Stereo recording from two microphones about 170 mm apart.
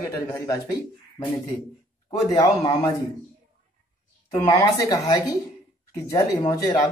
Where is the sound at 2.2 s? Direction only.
20° left (ahead or behind).